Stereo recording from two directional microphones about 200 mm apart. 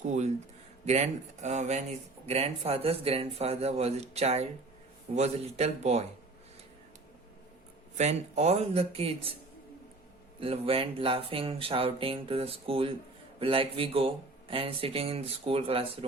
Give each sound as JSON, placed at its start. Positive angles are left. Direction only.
{"t": 0.0, "sound": "speech", "side_deg": -35}
{"t": 7.9, "sound": "speech", "side_deg": -35}
{"t": 10.4, "sound": "speech", "side_deg": -30}